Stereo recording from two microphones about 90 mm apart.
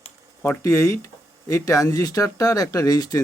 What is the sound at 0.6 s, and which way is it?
Speech, 35° left (ahead or behind).